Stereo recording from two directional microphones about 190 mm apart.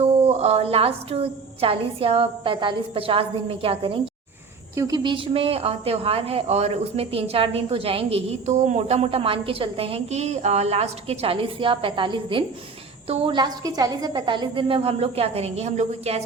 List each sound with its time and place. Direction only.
0.0 s a woman's voice: 35° right (ahead or behind)